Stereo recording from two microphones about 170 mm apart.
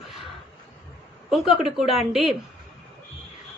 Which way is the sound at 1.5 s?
Centre (ahead or behind).